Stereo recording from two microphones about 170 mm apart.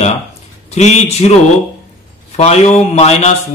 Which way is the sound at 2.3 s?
40° left (ahead or behind).